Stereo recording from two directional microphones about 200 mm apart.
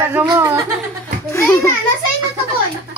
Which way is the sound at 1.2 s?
10° left (ahead or behind).